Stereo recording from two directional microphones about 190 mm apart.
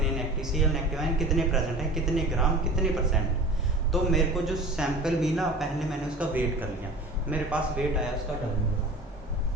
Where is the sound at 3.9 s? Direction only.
Centre (ahead or behind).